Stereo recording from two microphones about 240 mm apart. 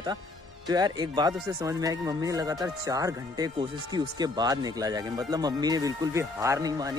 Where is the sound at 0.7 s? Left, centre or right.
Centre.